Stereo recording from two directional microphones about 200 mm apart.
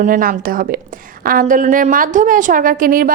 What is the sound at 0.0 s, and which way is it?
A woman's voice, 45° right (ahead or behind).